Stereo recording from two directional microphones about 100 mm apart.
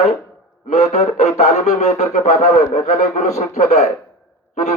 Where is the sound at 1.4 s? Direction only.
90° left.